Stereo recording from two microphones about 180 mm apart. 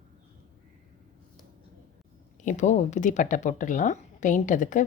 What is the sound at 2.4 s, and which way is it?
A woman's voice, 40° left (ahead or behind).